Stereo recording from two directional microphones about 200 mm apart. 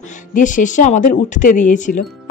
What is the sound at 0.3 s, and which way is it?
Speech, 40° left (ahead or behind).